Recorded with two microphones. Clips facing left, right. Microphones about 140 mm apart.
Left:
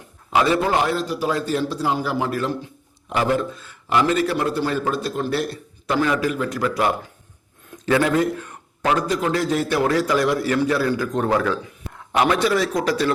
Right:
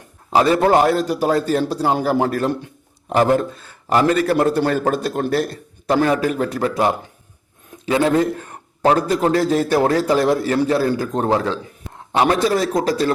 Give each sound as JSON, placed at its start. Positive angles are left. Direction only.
{"t": 0.3, "sound": "a man's voice", "side_deg": -40}
{"t": 0.6, "sound": "a man's voice", "side_deg": -50}
{"t": 1.3, "sound": "a man's voice", "side_deg": -40}
{"t": 3.1, "sound": "a man's voice", "side_deg": -40}